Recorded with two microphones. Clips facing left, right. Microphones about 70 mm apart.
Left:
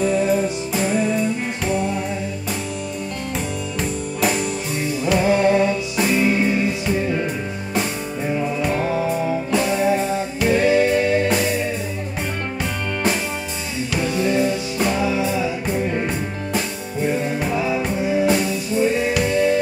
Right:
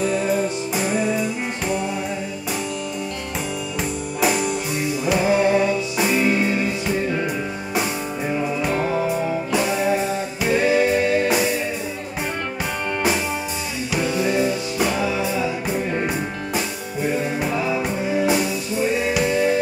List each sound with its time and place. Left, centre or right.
0.0 s music: centre
4.2 s music: centre
8.3 s music: centre
8.7 s music: right
9.0 s music: centre
13.9 s music: centre
15.0 s music: centre
15.7 s music: centre
17.2 s music: centre